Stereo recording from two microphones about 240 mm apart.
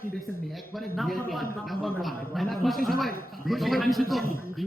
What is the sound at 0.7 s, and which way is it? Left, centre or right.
A man's voice, centre.